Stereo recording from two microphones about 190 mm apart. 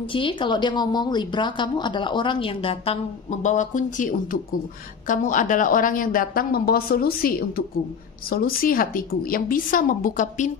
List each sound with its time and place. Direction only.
0.1 s a woman's voice: 25° left (ahead or behind); by 10.5 s 40° left (ahead or behind)